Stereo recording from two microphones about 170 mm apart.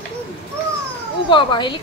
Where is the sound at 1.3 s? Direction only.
30° left (ahead or behind).